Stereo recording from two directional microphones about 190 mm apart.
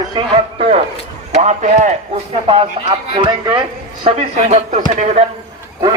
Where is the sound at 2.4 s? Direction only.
30° right (ahead or behind).